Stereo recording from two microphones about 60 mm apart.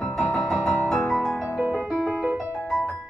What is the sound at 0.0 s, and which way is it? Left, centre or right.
Music, centre.